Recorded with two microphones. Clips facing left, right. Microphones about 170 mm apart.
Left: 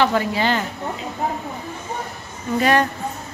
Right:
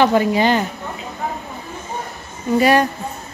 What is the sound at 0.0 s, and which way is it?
Speech, 15° right (ahead or behind).